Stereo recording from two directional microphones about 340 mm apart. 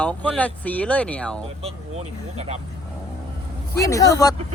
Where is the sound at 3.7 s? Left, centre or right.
Centre.